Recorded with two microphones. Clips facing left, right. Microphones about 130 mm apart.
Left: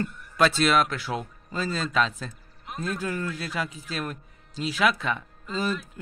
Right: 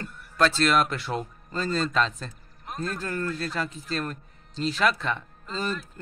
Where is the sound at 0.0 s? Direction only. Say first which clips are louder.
Left 1 dB; 5° left (ahead or behind).